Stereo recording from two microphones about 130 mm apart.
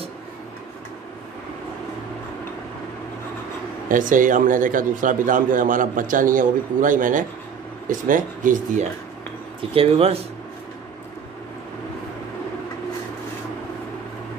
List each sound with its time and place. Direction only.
3.9 s a man's voice: 90° right
9.6 s speech: 45° right (ahead or behind)